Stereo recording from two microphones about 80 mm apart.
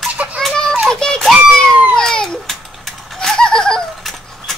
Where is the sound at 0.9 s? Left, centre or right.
Centre.